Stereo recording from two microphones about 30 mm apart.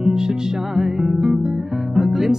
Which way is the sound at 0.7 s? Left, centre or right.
Right.